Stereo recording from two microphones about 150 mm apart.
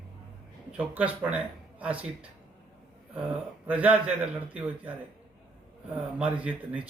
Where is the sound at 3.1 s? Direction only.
10° right (ahead or behind).